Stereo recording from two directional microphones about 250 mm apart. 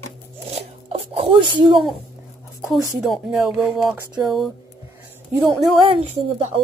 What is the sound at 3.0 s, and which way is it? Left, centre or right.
Music, centre.